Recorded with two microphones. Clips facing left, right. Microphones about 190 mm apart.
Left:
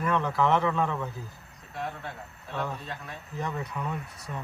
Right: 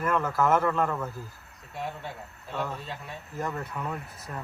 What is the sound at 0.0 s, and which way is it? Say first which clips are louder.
Speech: even; 5° right (ahead or behind).